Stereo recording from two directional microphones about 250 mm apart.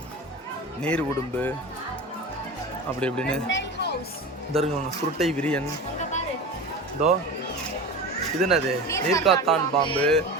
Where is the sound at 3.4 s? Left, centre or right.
Left.